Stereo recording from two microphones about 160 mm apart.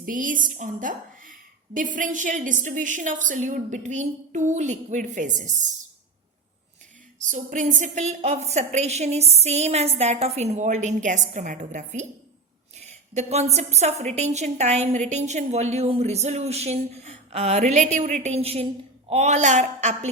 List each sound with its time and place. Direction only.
0.0 s a woman's voice: 55° right (ahead or behind)
7.3 s a woman's voice: 50° right (ahead or behind)